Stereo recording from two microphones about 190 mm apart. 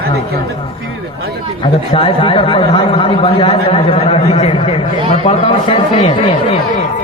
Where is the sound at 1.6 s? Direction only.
30° left (ahead or behind).